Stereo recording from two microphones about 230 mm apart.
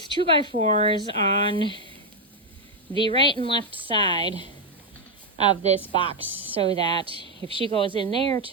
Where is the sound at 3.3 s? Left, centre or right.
Right.